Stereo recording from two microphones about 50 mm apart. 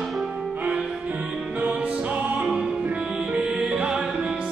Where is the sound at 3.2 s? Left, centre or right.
Right.